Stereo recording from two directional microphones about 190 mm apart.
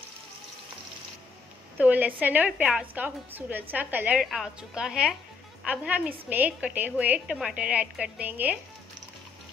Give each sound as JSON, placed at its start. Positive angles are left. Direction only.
{"t": 1.8, "sound": "a woman's voice", "side_deg": -10}